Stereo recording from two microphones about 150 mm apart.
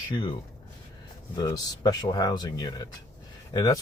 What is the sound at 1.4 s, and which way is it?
Speech, 25° left (ahead or behind).